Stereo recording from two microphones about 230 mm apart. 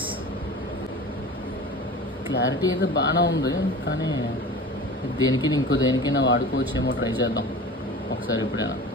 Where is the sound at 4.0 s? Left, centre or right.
Centre.